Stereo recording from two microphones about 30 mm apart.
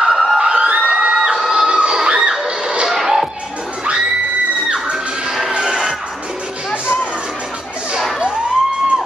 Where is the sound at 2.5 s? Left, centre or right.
Right.